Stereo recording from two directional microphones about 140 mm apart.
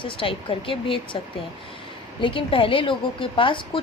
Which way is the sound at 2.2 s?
40° left (ahead or behind).